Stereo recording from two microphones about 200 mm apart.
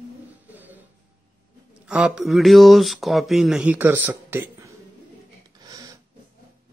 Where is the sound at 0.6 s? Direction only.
10° right (ahead or behind).